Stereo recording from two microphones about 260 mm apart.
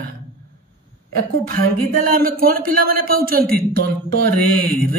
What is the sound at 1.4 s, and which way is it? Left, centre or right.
Speech, right.